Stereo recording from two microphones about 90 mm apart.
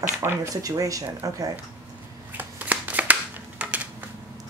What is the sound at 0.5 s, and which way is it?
Speech, 40° right (ahead or behind).